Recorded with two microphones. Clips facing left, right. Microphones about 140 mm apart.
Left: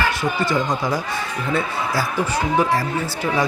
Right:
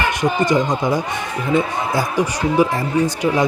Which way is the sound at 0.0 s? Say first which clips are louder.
Right 3 dB; 20° right (ahead or behind).